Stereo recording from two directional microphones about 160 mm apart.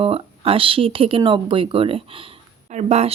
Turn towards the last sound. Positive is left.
turn(degrees=-40)  # may be behind; listen again after turning